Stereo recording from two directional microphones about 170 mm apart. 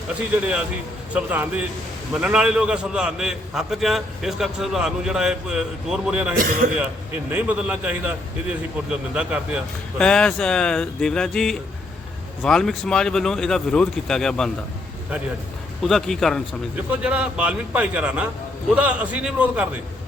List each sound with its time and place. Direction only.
0.1 s a man's voice: 5° right (ahead or behind)
6.4 s a man's voice: 60° right (ahead or behind)
7.3 s a man's voice: 10° right (ahead or behind)
10.0 s a man's voice: 5° left (ahead or behind)
15.8 s a man's voice: centre (ahead or behind)